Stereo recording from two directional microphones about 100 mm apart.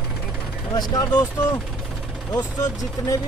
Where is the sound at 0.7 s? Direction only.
40° left (ahead or behind).